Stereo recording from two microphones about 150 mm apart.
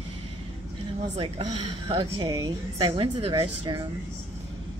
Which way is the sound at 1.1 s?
35° right (ahead or behind).